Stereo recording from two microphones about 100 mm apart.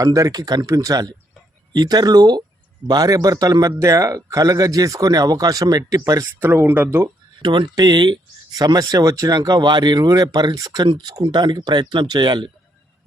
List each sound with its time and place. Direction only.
0.0 s speech: 35° right (ahead or behind)
6.4 s speech: 20° right (ahead or behind)
7.4 s speech: 50° right (ahead or behind)
10.8 s speech: 55° right (ahead or behind)